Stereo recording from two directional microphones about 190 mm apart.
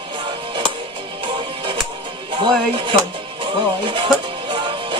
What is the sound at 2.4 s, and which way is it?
Speech, 25° right (ahead or behind).